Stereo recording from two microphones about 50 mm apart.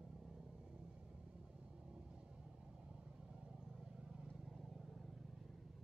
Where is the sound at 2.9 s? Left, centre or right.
Centre.